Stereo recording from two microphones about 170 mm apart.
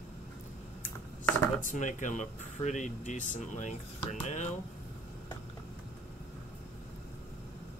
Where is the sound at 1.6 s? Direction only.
50° left (ahead or behind).